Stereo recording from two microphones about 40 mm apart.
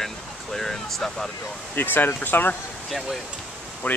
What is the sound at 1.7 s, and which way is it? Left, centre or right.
Speech, left.